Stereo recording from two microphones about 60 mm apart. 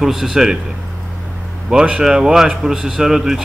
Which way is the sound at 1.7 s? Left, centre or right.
Centre.